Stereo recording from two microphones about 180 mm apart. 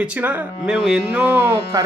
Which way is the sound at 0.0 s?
10° right (ahead or behind).